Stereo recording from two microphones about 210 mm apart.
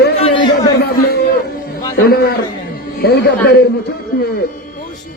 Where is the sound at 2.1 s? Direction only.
45° left (ahead or behind).